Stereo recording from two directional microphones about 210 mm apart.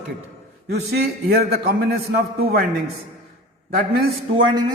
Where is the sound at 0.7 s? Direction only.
50° right (ahead or behind).